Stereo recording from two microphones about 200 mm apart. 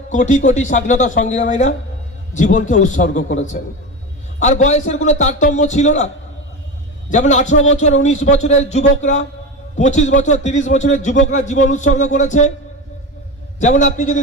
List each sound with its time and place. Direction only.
0.1 s a man's voice: 40° left (ahead or behind)
7.1 s a man's voice: 35° left (ahead or behind)
13.6 s a man's voice: 40° left (ahead or behind)